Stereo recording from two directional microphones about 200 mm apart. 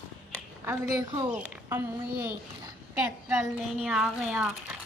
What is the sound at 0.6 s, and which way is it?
A woman's voice, 15° right (ahead or behind).